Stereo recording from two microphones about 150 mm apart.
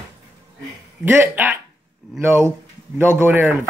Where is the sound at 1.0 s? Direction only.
15° right (ahead or behind).